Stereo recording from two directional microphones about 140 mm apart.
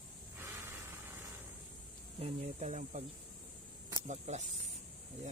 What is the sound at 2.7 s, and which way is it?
Speech, 60° right (ahead or behind).